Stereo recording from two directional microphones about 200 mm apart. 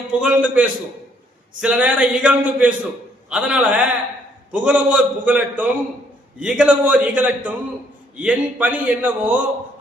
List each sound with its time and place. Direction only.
0.1 s a man's voice: 5° right (ahead or behind)